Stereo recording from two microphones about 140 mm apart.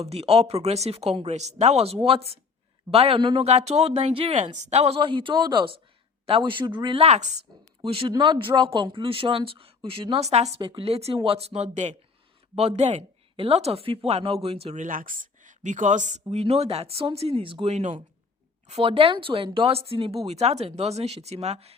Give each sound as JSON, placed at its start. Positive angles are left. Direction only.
{"t": 0.0, "sound": "a woman's voice", "side_deg": -45}
{"t": 3.4, "sound": "a woman's voice", "side_deg": -50}
{"t": 4.4, "sound": "a woman's voice", "side_deg": -55}
{"t": 4.9, "sound": "speech", "side_deg": -35}
{"t": 7.0, "sound": "a woman's voice", "side_deg": -50}
{"t": 7.8, "sound": "speech", "side_deg": -40}
{"t": 10.6, "sound": "speech", "side_deg": -30}
{"t": 10.8, "sound": "a woman's voice", "side_deg": -45}
{"t": 14.8, "sound": "speech", "side_deg": -70}
{"t": 16.3, "sound": "a woman's voice", "side_deg": -50}